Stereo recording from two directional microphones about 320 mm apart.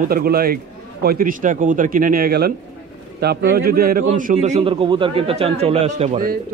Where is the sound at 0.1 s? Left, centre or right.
Right.